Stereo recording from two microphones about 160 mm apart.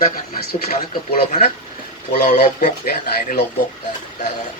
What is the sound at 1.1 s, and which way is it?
Speech, 50° left (ahead or behind).